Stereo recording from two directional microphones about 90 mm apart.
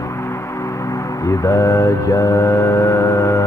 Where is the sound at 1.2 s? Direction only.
35° left (ahead or behind).